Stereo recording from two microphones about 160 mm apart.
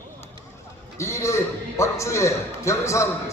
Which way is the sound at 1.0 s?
20° left (ahead or behind).